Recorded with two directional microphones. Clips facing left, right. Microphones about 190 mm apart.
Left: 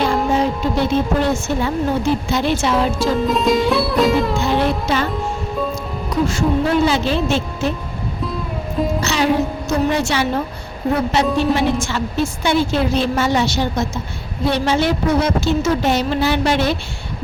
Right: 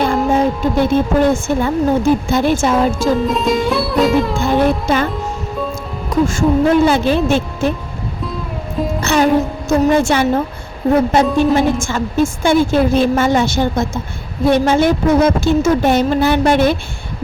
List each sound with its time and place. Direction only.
0.0 s a woman's voice: 50° right (ahead or behind)
3.2 s music: centre (ahead or behind)
4.4 s speech: 50° right (ahead or behind)
6.1 s music: 50° right (ahead or behind)
6.8 s a woman's voice: 50° right (ahead or behind)
9.0 s music: 50° right (ahead or behind)
11.3 s a woman's voice: 50° right (ahead or behind)